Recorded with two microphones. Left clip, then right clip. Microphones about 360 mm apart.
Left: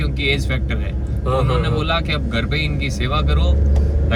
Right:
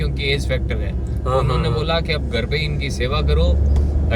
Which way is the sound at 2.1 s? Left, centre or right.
Centre.